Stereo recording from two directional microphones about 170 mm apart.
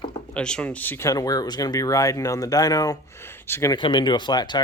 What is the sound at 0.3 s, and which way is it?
Speech, 5° left (ahead or behind).